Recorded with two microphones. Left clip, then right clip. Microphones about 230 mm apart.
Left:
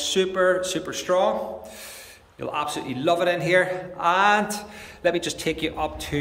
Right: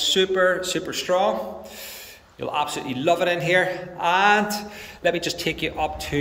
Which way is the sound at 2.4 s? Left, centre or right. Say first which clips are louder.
Right 2 dB; centre.